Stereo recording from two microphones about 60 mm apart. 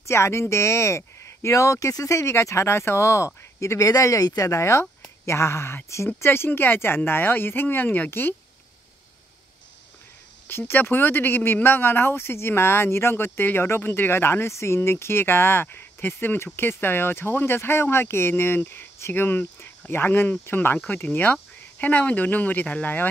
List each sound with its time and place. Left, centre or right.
0.0 s speech: left
3.9 s speech: left
10.7 s speech: left